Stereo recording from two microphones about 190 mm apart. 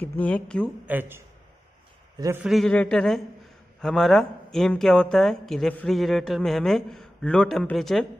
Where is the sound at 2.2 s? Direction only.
10° right (ahead or behind).